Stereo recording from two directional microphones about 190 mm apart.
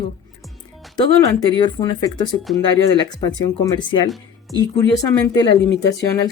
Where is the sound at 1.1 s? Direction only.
15° left (ahead or behind).